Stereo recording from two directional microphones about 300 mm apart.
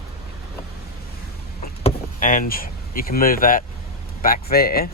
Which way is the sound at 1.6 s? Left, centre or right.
Left.